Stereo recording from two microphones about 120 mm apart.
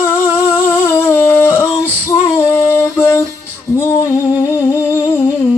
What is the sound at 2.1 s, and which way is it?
Female singing, 25° left (ahead or behind).